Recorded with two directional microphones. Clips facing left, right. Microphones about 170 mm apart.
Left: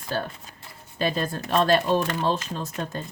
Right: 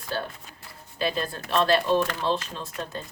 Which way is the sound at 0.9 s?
45° left (ahead or behind).